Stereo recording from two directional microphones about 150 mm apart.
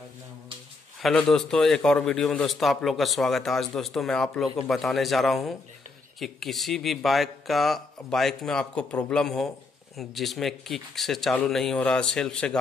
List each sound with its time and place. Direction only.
1.0 s a man's voice: 5° left (ahead or behind)